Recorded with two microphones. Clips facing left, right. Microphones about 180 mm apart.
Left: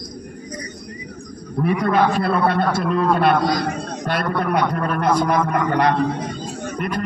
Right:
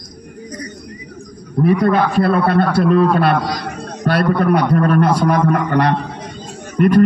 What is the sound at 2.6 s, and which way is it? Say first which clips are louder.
Speech: right 6 dB; 5° right (ahead or behind).